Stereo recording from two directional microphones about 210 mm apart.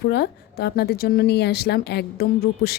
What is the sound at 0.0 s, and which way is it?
Speech, 50° left (ahead or behind).